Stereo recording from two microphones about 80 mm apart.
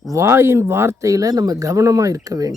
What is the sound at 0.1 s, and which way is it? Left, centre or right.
Speech, right.